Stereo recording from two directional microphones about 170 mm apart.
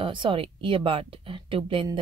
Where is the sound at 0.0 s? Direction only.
30° right (ahead or behind).